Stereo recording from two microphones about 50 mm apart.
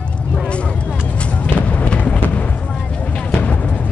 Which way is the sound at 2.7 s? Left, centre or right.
Centre.